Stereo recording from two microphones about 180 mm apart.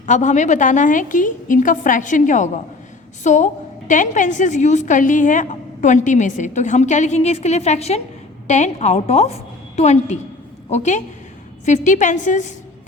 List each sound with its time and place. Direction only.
0.0 s a woman's voice: 40° left (ahead or behind)